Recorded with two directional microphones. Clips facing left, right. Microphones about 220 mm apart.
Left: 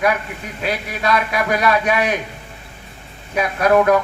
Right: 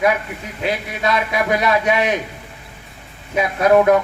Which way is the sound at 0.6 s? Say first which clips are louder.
Right 1 dB; 20° right (ahead or behind).